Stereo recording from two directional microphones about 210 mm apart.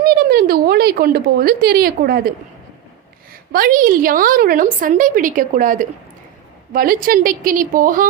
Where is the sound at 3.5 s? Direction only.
45° right (ahead or behind).